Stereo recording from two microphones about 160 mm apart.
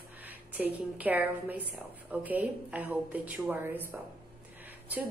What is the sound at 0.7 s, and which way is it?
A woman's voice, 10° right (ahead or behind).